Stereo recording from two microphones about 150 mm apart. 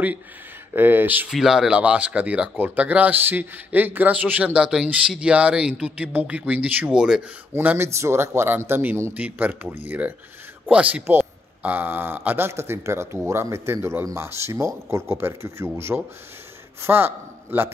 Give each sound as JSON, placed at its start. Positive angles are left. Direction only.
{"t": 0.7, "sound": "a man's voice", "side_deg": -15}